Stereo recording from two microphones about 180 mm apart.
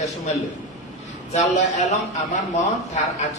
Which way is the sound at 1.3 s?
40° left (ahead or behind).